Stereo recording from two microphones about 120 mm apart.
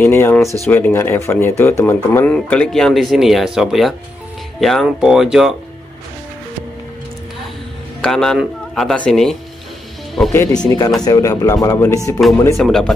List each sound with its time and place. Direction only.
0.0 s speech: 20° left (ahead or behind)
2.3 s speech: 10° left (ahead or behind)
8.0 s speech: 5° left (ahead or behind)
10.3 s speech: 30° left (ahead or behind)
12.5 s speech: centre (ahead or behind)